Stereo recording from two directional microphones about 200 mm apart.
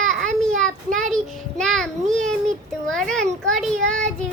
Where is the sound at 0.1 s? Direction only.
Centre (ahead or behind).